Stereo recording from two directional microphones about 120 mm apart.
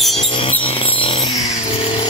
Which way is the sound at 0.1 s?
55° left (ahead or behind).